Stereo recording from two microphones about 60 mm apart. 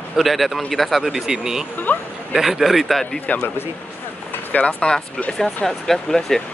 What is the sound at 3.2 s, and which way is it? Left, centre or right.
Speech, left.